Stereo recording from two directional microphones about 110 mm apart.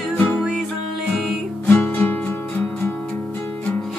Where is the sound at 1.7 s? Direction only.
15° left (ahead or behind).